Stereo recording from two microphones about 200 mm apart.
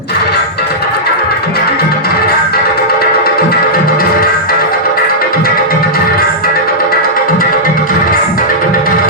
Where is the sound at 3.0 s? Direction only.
50° left (ahead or behind).